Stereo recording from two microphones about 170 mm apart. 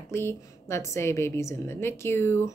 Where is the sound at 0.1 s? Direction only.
15° left (ahead or behind).